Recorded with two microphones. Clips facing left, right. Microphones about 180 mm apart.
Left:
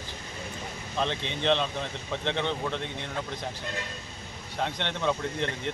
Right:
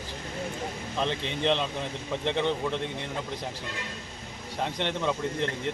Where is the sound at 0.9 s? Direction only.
5° right (ahead or behind).